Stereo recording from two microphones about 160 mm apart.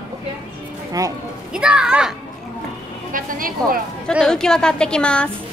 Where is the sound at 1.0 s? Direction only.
20° right (ahead or behind).